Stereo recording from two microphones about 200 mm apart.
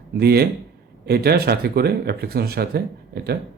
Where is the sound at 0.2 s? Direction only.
50° right (ahead or behind).